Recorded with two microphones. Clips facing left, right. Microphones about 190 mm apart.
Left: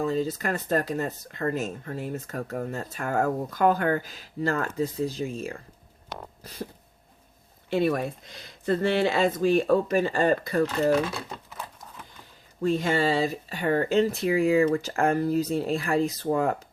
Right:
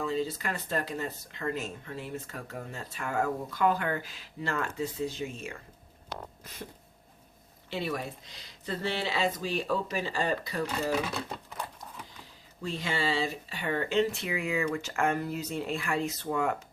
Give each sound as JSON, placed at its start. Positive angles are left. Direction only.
{"t": 0.0, "sound": "speech", "side_deg": 45}
{"t": 6.4, "sound": "a sound", "side_deg": 35}
{"t": 7.7, "sound": "speech", "side_deg": 50}
{"t": 12.6, "sound": "speech", "side_deg": 45}